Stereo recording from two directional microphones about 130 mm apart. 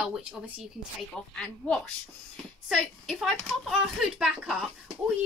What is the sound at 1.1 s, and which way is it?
A woman's voice, 5° left (ahead or behind).